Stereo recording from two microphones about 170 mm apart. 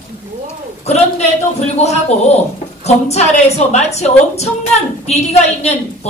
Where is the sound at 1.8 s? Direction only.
40° left (ahead or behind).